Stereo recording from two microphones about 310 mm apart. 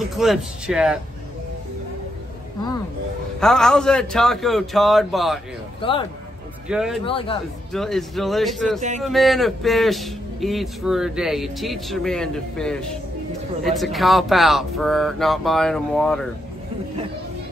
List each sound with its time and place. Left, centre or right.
0.1 s a man's voice: centre
3.3 s a man's voice: centre
5.8 s speech: centre
6.7 s a man's voice: centre
7.1 s a man's voice: centre
7.7 s a man's voice: centre